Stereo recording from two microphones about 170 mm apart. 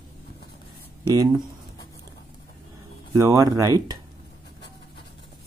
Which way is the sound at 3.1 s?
20° right (ahead or behind).